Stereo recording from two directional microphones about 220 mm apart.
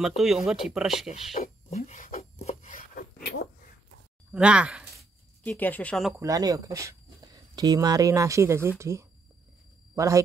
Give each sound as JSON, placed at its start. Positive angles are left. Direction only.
{"t": 0.2, "sound": "speech", "side_deg": 0}
{"t": 1.3, "sound": "a sound", "side_deg": 30}
{"t": 4.3, "sound": "speech", "side_deg": -5}
{"t": 5.4, "sound": "speech", "side_deg": 5}
{"t": 6.2, "sound": "speech", "side_deg": -15}